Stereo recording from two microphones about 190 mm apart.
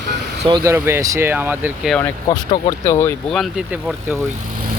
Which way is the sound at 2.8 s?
15° left (ahead or behind).